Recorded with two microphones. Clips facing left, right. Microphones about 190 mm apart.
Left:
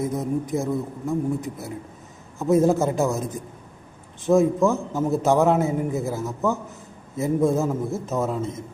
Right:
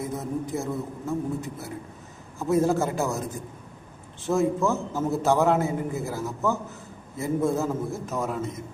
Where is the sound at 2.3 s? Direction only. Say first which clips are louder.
Left 4 dB; 20° left (ahead or behind).